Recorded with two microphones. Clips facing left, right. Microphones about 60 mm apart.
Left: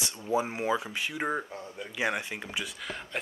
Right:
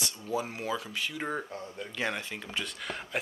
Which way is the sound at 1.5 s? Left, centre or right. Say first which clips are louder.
Even; centre.